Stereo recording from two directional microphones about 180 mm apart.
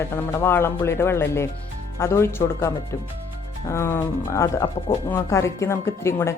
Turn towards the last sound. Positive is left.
turn(degrees=15)  # may be behind; listen again after turning